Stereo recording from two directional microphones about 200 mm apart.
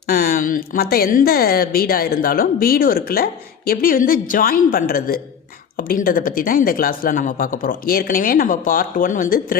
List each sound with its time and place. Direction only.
0.1 s speech: 45° left (ahead or behind)